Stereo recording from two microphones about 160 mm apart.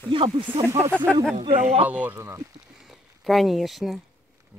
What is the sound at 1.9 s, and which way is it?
Speech, 10° right (ahead or behind).